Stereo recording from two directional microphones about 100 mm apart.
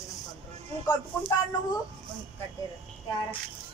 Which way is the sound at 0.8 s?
45° left (ahead or behind).